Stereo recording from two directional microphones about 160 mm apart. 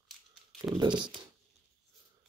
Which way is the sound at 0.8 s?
30° right (ahead or behind).